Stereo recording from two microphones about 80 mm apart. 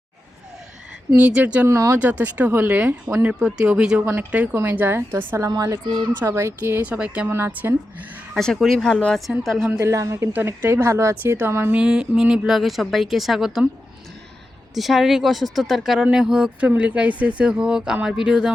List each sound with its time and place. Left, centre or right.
1.1 s a woman's voice: centre
1.6 s a woman's voice: right
2.0 s a woman's voice: centre
4.0 s a woman's voice: right
5.8 s speech: right
6.2 s a woman's voice: right
6.8 s speech: centre
7.3 s a woman's voice: right
8.4 s speech: centre
9.7 s a woman's voice: right
11.7 s speech: centre
14.8 s speech: centre